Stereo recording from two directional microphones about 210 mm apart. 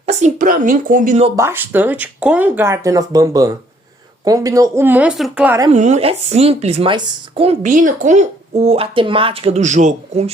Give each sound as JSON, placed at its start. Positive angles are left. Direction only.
{"t": 0.0, "sound": "speech", "side_deg": -35}
{"t": 1.4, "sound": "speech", "side_deg": -10}
{"t": 5.7, "sound": "speech", "side_deg": -35}
{"t": 7.6, "sound": "speech", "side_deg": -40}